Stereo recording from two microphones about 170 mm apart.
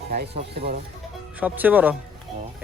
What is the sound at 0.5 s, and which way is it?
Speech, 70° right (ahead or behind).